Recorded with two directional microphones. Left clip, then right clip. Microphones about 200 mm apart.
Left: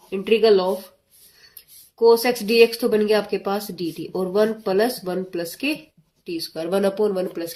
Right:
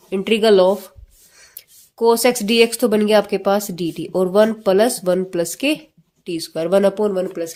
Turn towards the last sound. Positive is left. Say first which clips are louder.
# right 2 dB
turn(degrees=-25)  # may be behind; listen again after turning